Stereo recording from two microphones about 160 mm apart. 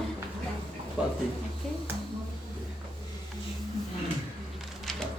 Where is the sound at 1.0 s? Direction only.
5° right (ahead or behind).